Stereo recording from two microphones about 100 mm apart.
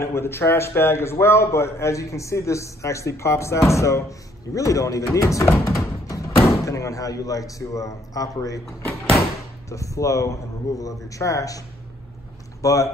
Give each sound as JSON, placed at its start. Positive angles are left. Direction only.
{"t": 0.0, "sound": "a man's voice", "side_deg": 25}
{"t": 8.6, "sound": "door", "side_deg": 0}
{"t": 9.7, "sound": "speech", "side_deg": 30}
{"t": 12.6, "sound": "speech", "side_deg": 35}